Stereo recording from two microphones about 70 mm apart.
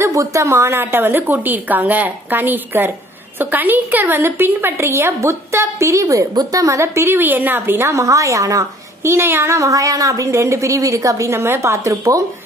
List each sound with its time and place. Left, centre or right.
0.0 s a woman's voice: right
7.9 s a woman's voice: right
9.0 s a woman's voice: right